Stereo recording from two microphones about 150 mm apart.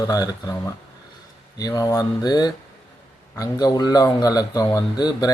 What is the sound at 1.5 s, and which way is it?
Speech, 25° left (ahead or behind).